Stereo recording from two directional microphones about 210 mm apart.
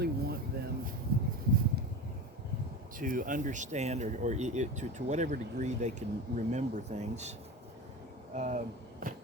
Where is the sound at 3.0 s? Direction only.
40° right (ahead or behind).